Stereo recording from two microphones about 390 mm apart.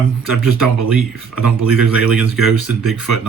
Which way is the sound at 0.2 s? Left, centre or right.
Left.